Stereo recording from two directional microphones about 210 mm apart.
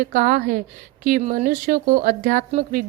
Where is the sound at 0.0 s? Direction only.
40° right (ahead or behind).